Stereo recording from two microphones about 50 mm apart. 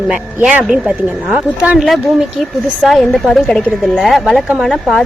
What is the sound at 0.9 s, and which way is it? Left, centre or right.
Speech, right.